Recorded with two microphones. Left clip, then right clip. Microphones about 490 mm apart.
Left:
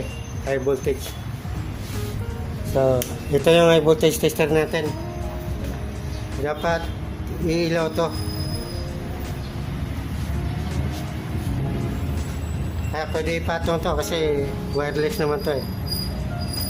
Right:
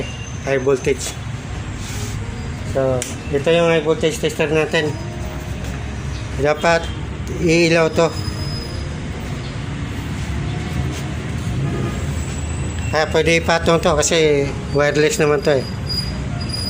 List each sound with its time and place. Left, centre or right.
0.4 s speech: left
2.8 s speech: left
6.4 s speech: left
12.9 s a man's voice: left